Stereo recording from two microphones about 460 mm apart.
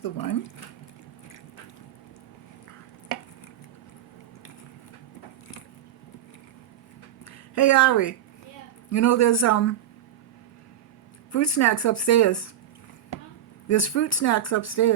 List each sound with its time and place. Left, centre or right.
0.0 s speech: left
7.3 s speech: left
11.3 s speech: left
13.7 s speech: left